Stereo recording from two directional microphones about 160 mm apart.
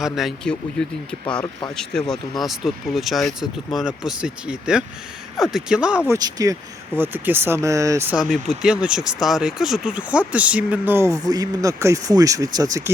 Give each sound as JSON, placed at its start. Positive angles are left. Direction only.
{"t": 0.0, "sound": "speech", "side_deg": 0}
{"t": 6.1, "sound": "speech", "side_deg": -25}
{"t": 8.1, "sound": "speech", "side_deg": 0}